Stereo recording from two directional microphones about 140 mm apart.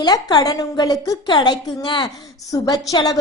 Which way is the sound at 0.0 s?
30° left (ahead or behind).